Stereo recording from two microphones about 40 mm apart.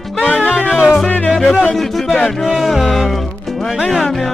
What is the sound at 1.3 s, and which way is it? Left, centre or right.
Music, centre.